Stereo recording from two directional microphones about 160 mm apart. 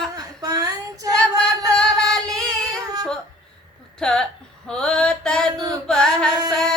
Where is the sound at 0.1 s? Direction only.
25° right (ahead or behind).